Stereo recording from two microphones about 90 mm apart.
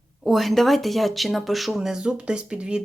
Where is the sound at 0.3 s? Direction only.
Centre (ahead or behind).